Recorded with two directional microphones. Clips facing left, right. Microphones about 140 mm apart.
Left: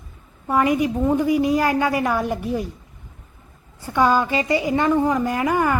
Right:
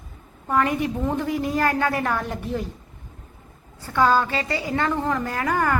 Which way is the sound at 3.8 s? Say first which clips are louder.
Left 1 dB; 15° left (ahead or behind).